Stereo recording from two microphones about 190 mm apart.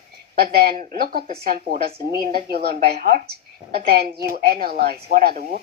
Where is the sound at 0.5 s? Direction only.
55° right (ahead or behind).